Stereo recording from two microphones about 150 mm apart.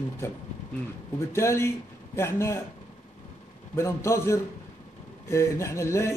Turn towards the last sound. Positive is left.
turn(degrees=20)  # may be behind; listen again after turning